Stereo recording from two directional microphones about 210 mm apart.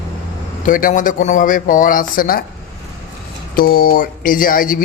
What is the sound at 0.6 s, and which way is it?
Speech, 40° left (ahead or behind).